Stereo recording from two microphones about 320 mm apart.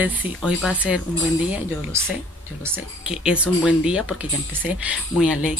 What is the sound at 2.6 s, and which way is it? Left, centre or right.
Speech, centre.